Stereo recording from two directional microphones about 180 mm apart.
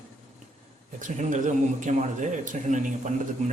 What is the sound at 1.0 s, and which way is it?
A man's voice, 45° right (ahead or behind).